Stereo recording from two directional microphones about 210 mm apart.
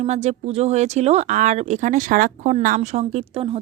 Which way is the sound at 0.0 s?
30° right (ahead or behind).